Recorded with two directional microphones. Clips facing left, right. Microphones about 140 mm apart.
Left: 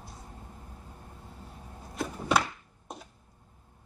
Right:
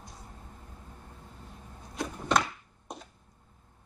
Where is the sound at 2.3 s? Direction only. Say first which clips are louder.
Even; 5° left (ahead or behind).